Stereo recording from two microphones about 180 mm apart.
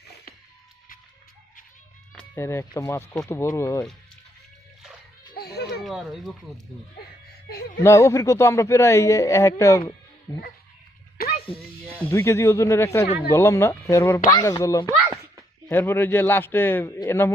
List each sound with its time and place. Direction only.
2.1 s speech: 15° left (ahead or behind)
5.4 s a sound: 60° left (ahead or behind)
5.8 s a sound: centre (ahead or behind)
7.8 s speech: 15° left (ahead or behind)
11.3 s music: 30° left (ahead or behind)
11.9 s speech: 10° left (ahead or behind)